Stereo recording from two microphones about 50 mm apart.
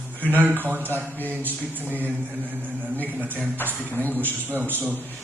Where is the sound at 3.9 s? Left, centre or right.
Left.